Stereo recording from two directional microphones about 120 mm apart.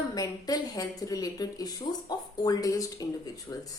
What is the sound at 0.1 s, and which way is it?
A woman's voice, 35° left (ahead or behind).